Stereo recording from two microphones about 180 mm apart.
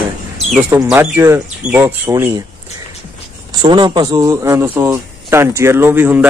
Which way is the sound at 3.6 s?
25° right (ahead or behind).